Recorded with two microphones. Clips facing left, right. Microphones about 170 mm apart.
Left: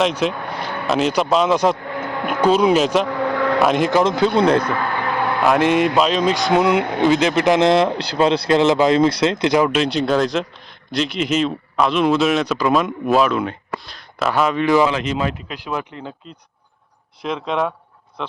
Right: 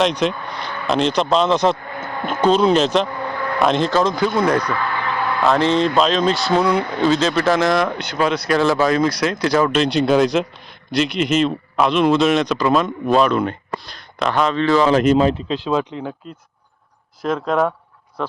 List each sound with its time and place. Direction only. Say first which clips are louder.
0.0 s speech: right 1 dB; 5° left (ahead or behind)
1.9 s a sound: left 3 dB; 70° left (ahead or behind)
2.2 s speech: even; 10° left (ahead or behind)
3.1 s vehicle: left 6 dB; 90° left
3.6 s speech: right 1 dB; 10° left (ahead or behind); by 4.7 s 25° left (ahead or behind)
4.7 s a sound: left 1 dB; 45° left (ahead or behind)
5.2 s speech: left 1 dB; 15° left (ahead or behind)
14.8 s speech: right 8 dB; 45° right (ahead or behind)
15.2 s speech: right 7 dB; 30° right (ahead or behind)
17.2 s speech: right 3 dB; 5° right (ahead or behind)